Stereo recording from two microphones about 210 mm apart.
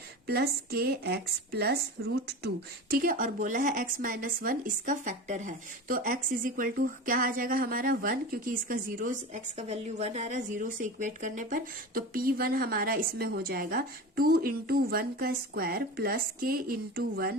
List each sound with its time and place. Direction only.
0.3 s speech: 50° right (ahead or behind)
2.9 s speech: 40° right (ahead or behind)